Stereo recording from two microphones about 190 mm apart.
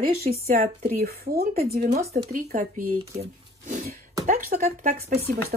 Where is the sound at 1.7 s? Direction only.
40° right (ahead or behind).